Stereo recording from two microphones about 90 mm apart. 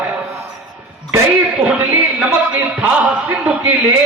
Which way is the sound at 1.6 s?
20° right (ahead or behind).